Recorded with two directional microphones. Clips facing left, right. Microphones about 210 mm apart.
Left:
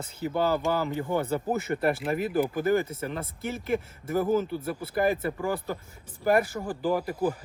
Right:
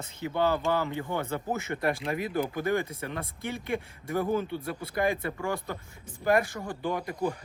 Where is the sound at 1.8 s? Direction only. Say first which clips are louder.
Left 2 dB; 5° left (ahead or behind).